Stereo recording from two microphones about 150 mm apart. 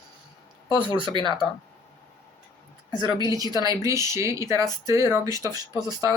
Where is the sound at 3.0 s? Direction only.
25° right (ahead or behind).